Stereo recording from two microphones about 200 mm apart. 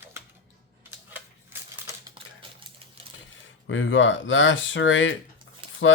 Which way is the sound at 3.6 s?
70° left (ahead or behind).